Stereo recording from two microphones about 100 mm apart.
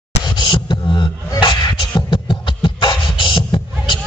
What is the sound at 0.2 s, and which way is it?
Beatboxing, 55° left (ahead or behind).